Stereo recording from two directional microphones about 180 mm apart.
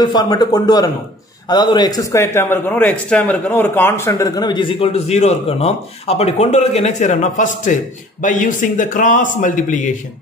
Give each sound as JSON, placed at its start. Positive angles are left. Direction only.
{"t": 0.0, "sound": "a man's voice", "side_deg": 25}